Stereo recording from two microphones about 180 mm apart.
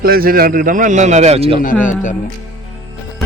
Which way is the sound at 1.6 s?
45° left (ahead or behind).